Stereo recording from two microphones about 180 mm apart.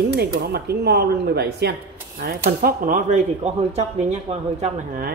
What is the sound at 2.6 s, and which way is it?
Speech, 50° right (ahead or behind).